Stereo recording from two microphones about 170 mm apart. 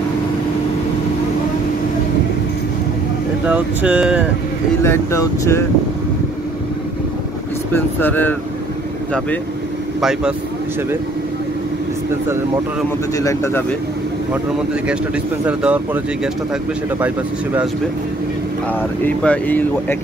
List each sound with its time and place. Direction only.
3.4 s speech: 5° right (ahead or behind)
4.8 s speech: 15° left (ahead or behind)
7.7 s speech: 10° left (ahead or behind)
9.9 s speech: 5° right (ahead or behind)
13.2 s speech: 20° left (ahead or behind)
14.3 s speech: 5° right (ahead or behind)
19.0 s speech: 10° left (ahead or behind)